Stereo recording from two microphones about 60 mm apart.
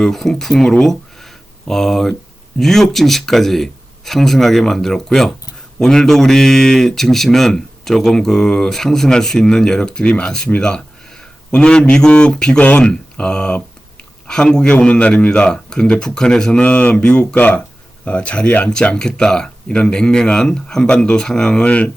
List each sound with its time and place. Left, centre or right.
0.0 s speech: centre; by 21.9 s left